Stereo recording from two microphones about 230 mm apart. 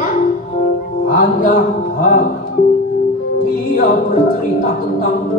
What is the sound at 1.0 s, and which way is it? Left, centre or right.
Music, left.